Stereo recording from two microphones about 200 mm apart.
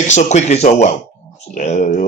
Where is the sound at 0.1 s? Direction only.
35° left (ahead or behind).